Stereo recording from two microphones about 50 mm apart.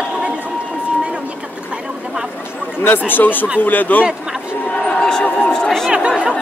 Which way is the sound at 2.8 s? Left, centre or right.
Left.